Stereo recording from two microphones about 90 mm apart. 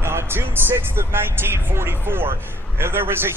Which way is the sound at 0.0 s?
25° right (ahead or behind).